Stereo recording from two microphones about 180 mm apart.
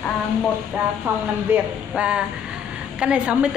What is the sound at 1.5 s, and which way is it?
A woman's voice, 5° right (ahead or behind).